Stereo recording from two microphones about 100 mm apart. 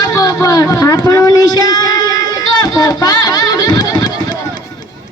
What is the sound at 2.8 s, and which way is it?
Music, 40° left (ahead or behind).